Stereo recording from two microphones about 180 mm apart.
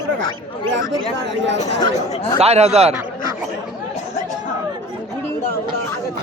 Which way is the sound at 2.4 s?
35° right (ahead or behind).